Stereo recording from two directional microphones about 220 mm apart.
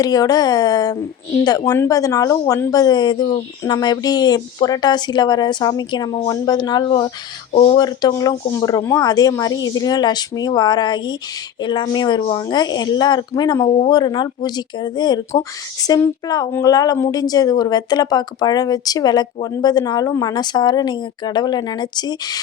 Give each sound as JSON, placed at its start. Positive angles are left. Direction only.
{"t": 0.0, "sound": "speech", "side_deg": 15}
{"t": 7.5, "sound": "speech", "side_deg": 30}
{"t": 7.8, "sound": "speech", "side_deg": 20}